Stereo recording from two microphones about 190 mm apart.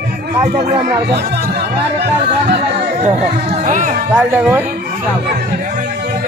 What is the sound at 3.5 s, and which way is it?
Speech, 40° right (ahead or behind).